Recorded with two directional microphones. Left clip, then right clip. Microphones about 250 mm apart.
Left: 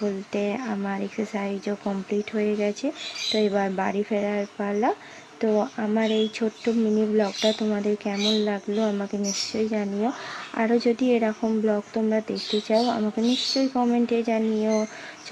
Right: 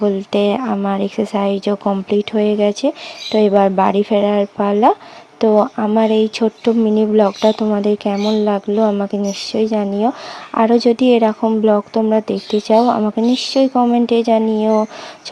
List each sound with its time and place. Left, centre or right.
0.0 s speech: right